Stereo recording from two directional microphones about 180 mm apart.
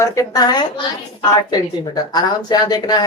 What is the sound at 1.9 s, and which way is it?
Speech, 20° left (ahead or behind).